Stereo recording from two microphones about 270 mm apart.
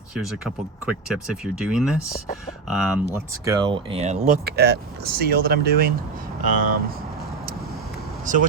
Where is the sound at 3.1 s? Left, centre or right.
Centre.